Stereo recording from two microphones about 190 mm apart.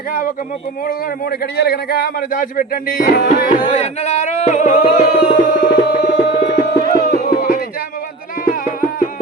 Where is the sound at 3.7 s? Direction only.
35° left (ahead or behind).